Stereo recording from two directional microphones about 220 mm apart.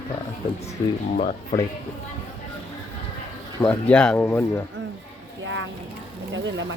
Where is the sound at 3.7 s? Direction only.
5° left (ahead or behind).